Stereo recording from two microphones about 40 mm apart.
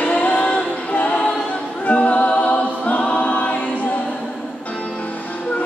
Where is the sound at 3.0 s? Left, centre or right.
Left.